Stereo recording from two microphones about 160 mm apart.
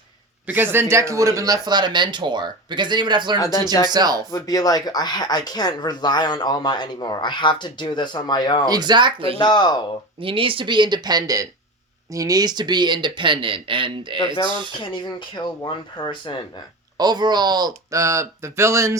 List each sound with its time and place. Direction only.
0.4 s speech: 10° right (ahead or behind); by 3.3 s 30° right (ahead or behind)
3.3 s speech: 20° left (ahead or behind)
3.8 s speech: 25° right (ahead or behind)
4.3 s speech: 20° left (ahead or behind)
8.6 s speech: 25° right (ahead or behind)
9.4 s speech: 25° left (ahead or behind)
10.2 s speech: 35° right (ahead or behind)
15.6 s speech: 30° left (ahead or behind)
17.0 s speech: 25° right (ahead or behind)